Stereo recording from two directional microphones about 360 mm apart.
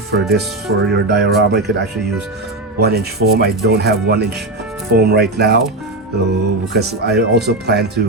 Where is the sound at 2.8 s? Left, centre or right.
Right.